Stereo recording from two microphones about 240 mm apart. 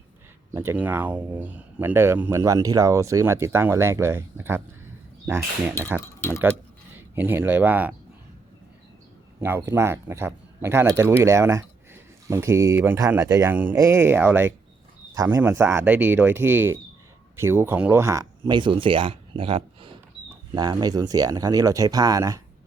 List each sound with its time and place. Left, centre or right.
0.5 s speech: centre
6.9 s speech: centre
9.4 s speech: centre